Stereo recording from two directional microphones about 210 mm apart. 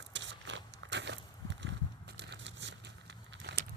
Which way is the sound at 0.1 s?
60° right (ahead or behind).